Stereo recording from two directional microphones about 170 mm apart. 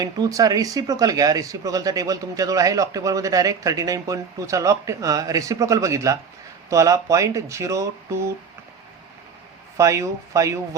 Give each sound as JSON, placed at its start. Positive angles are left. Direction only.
{"t": 0.0, "sound": "speech", "side_deg": -20}
{"t": 9.7, "sound": "speech", "side_deg": -15}